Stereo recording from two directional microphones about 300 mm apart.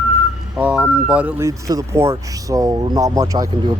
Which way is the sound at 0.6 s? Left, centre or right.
Centre.